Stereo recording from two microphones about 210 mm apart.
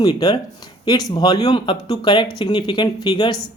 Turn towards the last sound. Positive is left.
turn(degrees=20)  # may be behind; listen again after turning